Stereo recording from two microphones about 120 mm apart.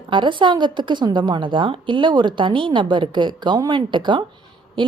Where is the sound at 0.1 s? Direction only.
40° right (ahead or behind).